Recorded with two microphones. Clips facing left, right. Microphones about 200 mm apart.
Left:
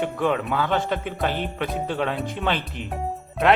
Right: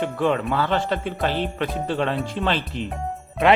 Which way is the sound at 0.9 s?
15° left (ahead or behind).